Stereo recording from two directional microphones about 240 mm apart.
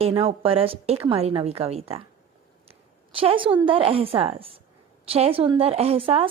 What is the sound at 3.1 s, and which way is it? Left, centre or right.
A woman's voice, right.